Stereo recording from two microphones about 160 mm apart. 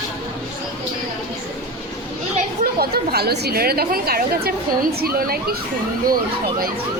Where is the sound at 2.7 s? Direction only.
80° right.